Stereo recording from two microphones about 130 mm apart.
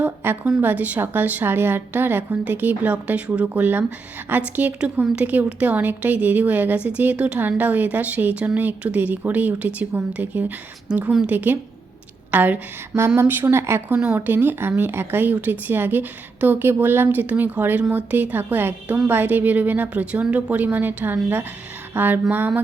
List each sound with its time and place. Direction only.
0.0 s a woman's voice: 15° right (ahead or behind)